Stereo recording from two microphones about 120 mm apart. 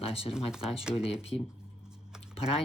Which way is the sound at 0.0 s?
55° left (ahead or behind).